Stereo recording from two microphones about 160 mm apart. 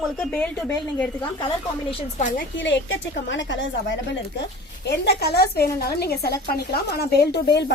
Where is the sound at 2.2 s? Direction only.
55° left (ahead or behind).